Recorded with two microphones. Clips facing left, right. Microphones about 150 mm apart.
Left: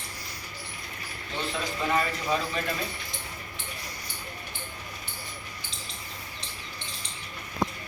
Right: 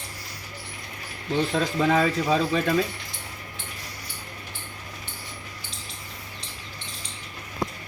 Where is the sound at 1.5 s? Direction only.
90° right.